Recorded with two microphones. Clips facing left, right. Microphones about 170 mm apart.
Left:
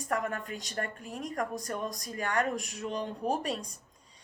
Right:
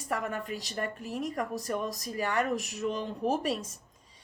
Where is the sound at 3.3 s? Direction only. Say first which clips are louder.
Right 2 dB; 40° left (ahead or behind).